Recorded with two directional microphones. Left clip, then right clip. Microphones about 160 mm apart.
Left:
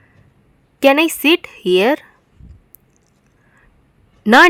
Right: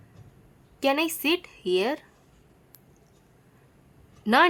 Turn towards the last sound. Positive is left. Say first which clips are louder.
# left 12 dB
turn(degrees=45)  # may be behind; listen again after turning